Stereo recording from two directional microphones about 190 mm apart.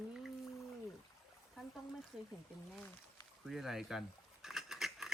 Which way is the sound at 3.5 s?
Centre (ahead or behind).